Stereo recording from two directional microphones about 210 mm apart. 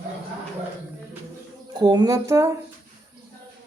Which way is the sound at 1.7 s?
20° right (ahead or behind).